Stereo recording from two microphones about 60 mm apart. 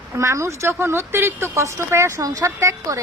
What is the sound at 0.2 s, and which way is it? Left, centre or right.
Speech, right.